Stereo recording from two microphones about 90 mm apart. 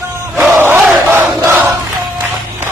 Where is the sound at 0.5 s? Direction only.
20° right (ahead or behind).